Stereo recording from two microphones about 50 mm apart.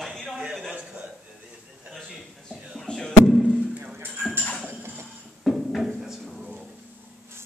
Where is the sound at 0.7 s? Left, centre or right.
Right.